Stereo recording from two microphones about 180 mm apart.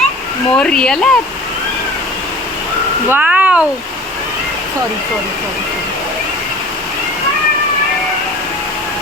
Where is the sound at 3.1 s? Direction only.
10° right (ahead or behind).